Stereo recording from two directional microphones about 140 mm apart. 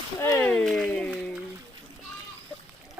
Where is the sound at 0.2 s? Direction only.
15° left (ahead or behind).